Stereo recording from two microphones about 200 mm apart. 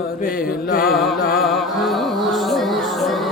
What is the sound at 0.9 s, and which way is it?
Music, centre (ahead or behind).